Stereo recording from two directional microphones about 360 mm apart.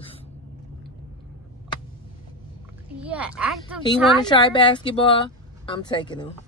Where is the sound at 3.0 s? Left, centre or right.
Centre.